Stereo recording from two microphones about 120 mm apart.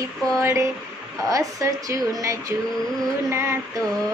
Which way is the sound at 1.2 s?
25° right (ahead or behind).